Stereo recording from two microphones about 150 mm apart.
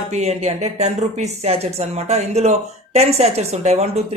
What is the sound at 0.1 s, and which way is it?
A woman's voice, 45° right (ahead or behind).